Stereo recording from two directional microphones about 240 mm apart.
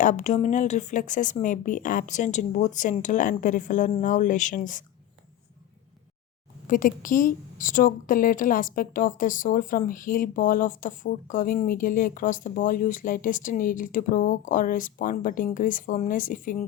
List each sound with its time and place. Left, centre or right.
0.0 s a woman's voice: left
6.7 s a woman's voice: left